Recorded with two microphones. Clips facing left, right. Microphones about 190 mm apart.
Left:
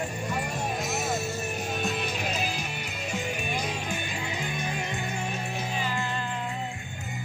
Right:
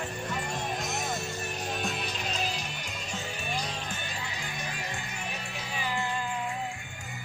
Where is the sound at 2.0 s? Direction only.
55° left (ahead or behind).